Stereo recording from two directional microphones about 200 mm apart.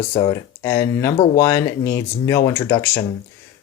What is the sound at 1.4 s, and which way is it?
Speech, 15° left (ahead or behind).